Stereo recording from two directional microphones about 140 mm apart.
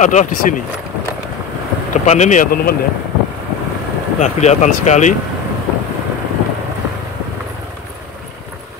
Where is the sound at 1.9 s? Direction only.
55° left (ahead or behind); by 2.8 s 80° left.